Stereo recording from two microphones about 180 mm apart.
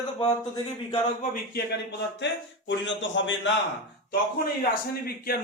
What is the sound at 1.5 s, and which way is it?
A man's voice, 70° left (ahead or behind).